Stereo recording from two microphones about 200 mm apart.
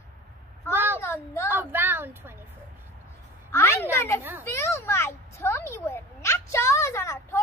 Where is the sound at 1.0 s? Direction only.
10° left (ahead or behind).